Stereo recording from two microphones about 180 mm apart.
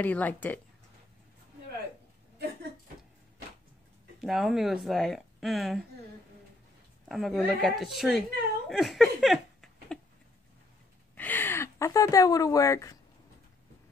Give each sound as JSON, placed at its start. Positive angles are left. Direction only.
{"t": 0.0, "sound": "speech", "side_deg": 10}
{"t": 4.2, "sound": "speech", "side_deg": 0}
{"t": 7.1, "sound": "speech", "side_deg": 0}
{"t": 8.6, "sound": "a sound", "side_deg": 0}
{"t": 11.1, "sound": "speech", "side_deg": 10}